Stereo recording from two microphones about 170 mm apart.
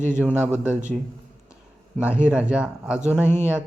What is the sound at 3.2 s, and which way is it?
Speech, 15° left (ahead or behind).